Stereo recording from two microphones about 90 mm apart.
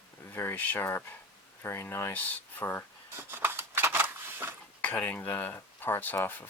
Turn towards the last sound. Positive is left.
turn(degrees=25)  # may be behind; listen again after turning